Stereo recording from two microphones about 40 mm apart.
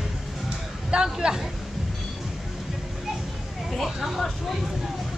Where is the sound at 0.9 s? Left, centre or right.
Right.